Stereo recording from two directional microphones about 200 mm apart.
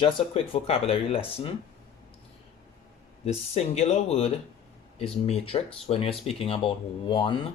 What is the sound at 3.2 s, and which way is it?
Speech, 35° left (ahead or behind).